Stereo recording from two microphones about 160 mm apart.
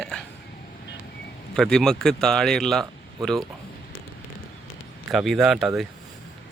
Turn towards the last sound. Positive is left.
turn(degrees=0)  # may be behind; listen again after turning